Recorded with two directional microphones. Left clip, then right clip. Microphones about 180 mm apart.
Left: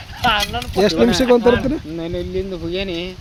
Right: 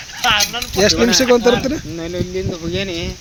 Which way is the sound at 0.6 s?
5° left (ahead or behind).